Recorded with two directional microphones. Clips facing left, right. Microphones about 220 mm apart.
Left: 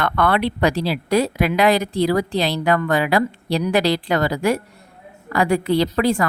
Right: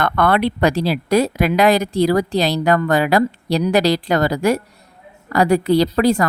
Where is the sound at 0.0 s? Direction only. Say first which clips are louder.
Right 2 dB; 45° right (ahead or behind).